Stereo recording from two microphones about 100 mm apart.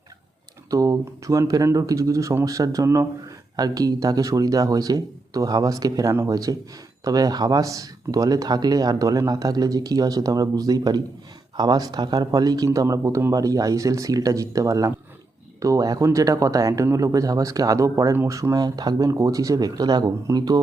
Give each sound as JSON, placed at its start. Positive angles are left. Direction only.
{"t": 0.7, "sound": "speech", "side_deg": -35}